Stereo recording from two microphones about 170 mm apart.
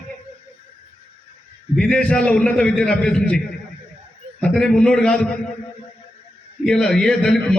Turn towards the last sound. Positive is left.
turn(degrees=5)  # may be behind; listen again after turning